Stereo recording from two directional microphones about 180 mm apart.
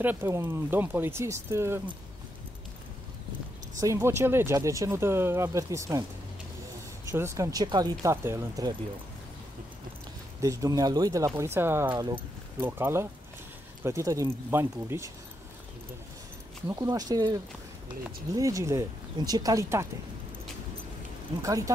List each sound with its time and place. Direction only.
0.0 s speech: 10° right (ahead or behind)
3.8 s speech: 15° right (ahead or behind)
7.1 s speech: 15° right (ahead or behind)
10.4 s speech: 20° right (ahead or behind)
12.5 s speech: 10° right (ahead or behind)
16.6 s speech: 20° right (ahead or behind)
21.4 s speech: 20° right (ahead or behind)